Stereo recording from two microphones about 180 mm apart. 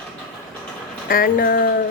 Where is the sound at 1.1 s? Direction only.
50° left (ahead or behind).